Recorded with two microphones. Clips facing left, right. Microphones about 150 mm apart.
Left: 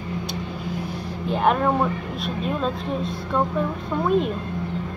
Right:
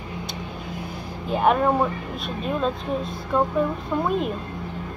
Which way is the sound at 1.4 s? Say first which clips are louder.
Right 1 dB; 5° right (ahead or behind).